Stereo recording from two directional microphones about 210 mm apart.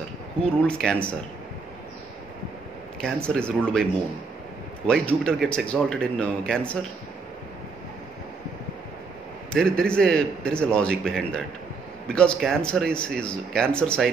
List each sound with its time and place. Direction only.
0.4 s speech: 5° left (ahead or behind)
3.0 s speech: 5° left (ahead or behind)
4.8 s speech: 5° left (ahead or behind)
9.5 s speech: 5° left (ahead or behind)